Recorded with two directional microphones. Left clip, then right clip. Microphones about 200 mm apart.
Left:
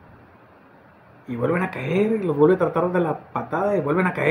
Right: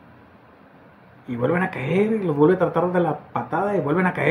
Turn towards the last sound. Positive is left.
turn(degrees=0)  # may be behind; listen again after turning